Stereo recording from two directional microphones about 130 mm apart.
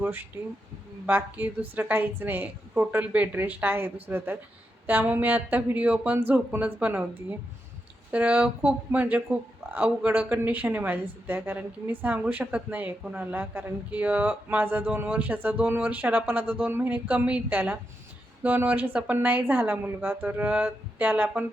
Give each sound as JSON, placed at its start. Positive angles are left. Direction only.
{"t": 0.0, "sound": "speech", "side_deg": -15}
{"t": 8.1, "sound": "speech", "side_deg": -10}